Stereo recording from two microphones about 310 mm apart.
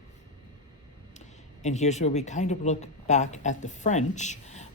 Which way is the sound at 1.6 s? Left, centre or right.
Left.